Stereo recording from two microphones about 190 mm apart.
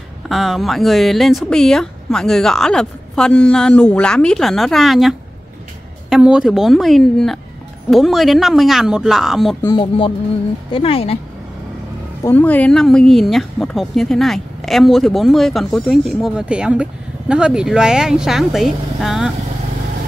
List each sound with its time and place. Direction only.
0.3 s speech: centre (ahead or behind)
9.6 s speech: 20° left (ahead or behind)
12.2 s speech: 10° left (ahead or behind)